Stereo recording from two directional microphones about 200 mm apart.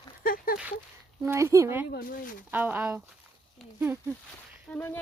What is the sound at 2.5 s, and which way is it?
Speech, 10° right (ahead or behind).